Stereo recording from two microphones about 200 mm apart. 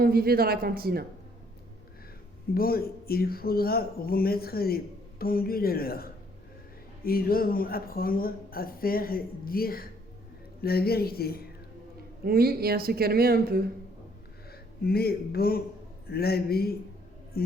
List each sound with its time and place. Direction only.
0.0 s speech: 50° right (ahead or behind)
2.6 s speech: 50° left (ahead or behind)
12.2 s speech: 50° right (ahead or behind)
14.8 s speech: 50° left (ahead or behind)